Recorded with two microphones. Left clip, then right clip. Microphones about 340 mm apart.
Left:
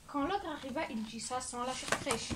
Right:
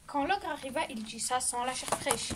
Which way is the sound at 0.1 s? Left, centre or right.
Right.